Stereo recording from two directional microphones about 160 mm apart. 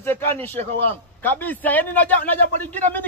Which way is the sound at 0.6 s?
50° right (ahead or behind).